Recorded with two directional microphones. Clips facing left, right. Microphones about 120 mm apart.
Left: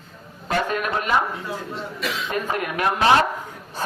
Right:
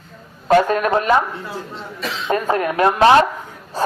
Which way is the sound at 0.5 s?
40° right (ahead or behind).